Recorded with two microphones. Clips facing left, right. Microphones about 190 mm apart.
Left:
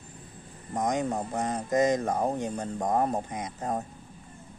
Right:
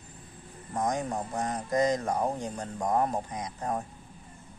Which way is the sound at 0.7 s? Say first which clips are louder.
Left 2 dB; 20° left (ahead or behind).